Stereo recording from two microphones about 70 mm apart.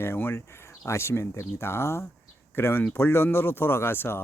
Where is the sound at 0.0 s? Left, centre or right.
Left.